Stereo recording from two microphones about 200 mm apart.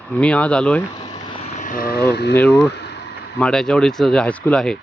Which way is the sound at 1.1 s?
30° left (ahead or behind).